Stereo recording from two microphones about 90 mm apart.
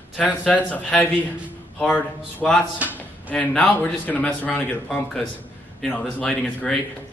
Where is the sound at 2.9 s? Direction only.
20° left (ahead or behind).